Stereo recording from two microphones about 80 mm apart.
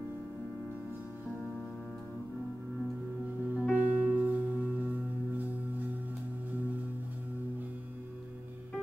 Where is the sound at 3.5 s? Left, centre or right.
Centre.